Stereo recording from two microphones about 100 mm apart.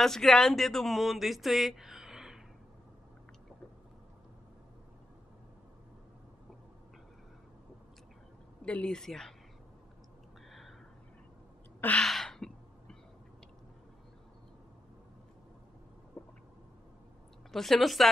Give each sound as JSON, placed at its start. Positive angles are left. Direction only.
{"t": 0.0, "sound": "speech", "side_deg": 5}
{"t": 8.6, "sound": "speech", "side_deg": 10}
{"t": 11.8, "sound": "gasp", "side_deg": 15}
{"t": 12.1, "sound": "throat clearing", "side_deg": 5}
{"t": 16.1, "sound": "a sound", "side_deg": 20}
{"t": 17.5, "sound": "speech", "side_deg": 0}